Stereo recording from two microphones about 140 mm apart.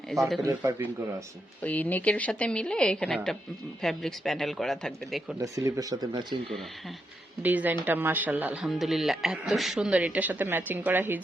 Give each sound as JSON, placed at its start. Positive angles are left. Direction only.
{"t": 0.1, "sound": "speech", "side_deg": 0}
{"t": 0.4, "sound": "speech", "side_deg": -15}
{"t": 1.6, "sound": "a woman's voice", "side_deg": 10}
{"t": 5.4, "sound": "speech", "side_deg": -25}
{"t": 7.4, "sound": "speech", "side_deg": -10}
{"t": 8.6, "sound": "speech", "side_deg": 0}